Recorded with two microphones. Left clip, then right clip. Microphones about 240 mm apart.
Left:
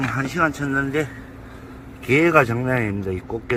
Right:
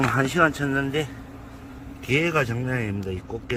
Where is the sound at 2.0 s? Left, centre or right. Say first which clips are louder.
Left 7 dB; centre.